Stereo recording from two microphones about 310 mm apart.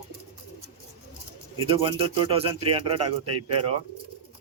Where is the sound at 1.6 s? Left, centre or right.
Centre.